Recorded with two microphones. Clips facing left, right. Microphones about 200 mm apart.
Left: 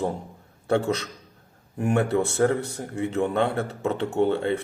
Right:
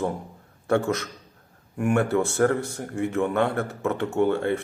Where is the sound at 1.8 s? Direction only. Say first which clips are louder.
Even; 25° left (ahead or behind).